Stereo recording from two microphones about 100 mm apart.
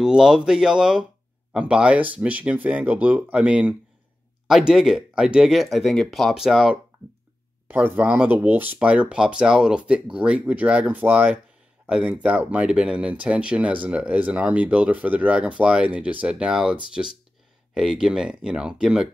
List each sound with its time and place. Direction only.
0.0 s speech: 5° right (ahead or behind)
7.6 s speech: 20° right (ahead or behind)